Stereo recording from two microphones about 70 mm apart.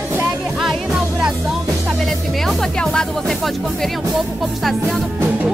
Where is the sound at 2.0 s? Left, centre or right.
Centre.